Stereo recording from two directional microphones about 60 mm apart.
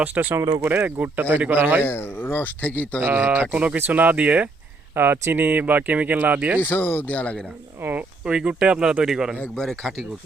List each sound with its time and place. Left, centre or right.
0.0 s speech: right
1.8 s speech: left
2.6 s speech: left
3.0 s speech: right
4.9 s speech: right
6.6 s speech: left
7.8 s speech: right
8.2 s speech: centre
9.6 s speech: centre